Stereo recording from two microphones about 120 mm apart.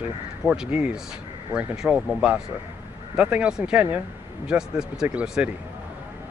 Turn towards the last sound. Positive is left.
turn(degrees=-10)  # may be behind; listen again after turning